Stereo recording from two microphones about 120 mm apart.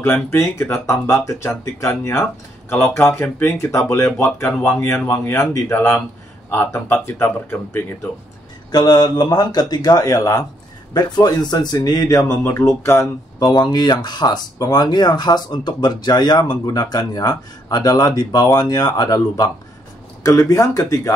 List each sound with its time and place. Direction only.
0.0 s speech: 20° left (ahead or behind)
4.5 s speech: 10° left (ahead or behind)
4.7 s speech: 25° left (ahead or behind)
8.7 s speech: 35° left (ahead or behind)
13.4 s speech: 35° left (ahead or behind)